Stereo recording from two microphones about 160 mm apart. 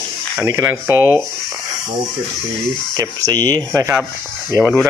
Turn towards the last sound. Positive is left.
turn(degrees=-20)  # may be behind; listen again after turning